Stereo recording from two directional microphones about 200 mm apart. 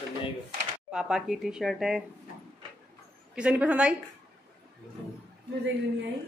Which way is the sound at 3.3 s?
5° right (ahead or behind).